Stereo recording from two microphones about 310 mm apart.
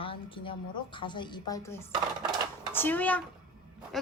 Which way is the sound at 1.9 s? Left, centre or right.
Centre.